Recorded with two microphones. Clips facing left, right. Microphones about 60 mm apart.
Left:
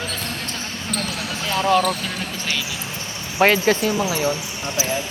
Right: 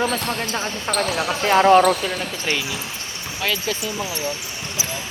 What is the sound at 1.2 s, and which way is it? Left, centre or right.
Speech, right.